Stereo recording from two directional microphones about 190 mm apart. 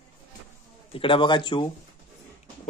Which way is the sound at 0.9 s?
25° left (ahead or behind).